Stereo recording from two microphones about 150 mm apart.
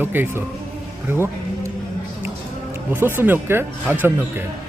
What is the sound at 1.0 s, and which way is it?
Music, 15° right (ahead or behind).